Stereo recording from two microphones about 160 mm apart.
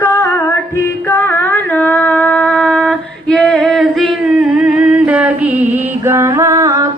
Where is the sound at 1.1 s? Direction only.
15° left (ahead or behind).